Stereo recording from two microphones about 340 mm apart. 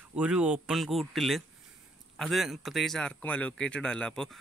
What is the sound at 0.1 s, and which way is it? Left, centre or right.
A man's voice, centre.